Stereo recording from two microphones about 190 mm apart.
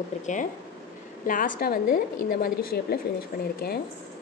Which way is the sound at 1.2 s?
45° left (ahead or behind).